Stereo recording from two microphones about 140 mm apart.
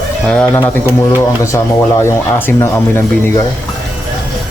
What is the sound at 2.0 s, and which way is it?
Speech, 20° left (ahead or behind).